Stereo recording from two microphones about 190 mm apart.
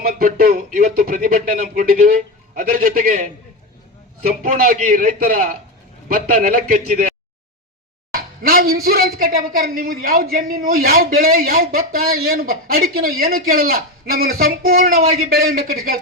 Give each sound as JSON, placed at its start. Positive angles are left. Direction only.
{"t": 0.1, "sound": "speech", "side_deg": -50}
{"t": 4.5, "sound": "speech", "side_deg": -45}
{"t": 8.1, "sound": "a sound", "side_deg": -50}
{"t": 8.7, "sound": "speech", "side_deg": -50}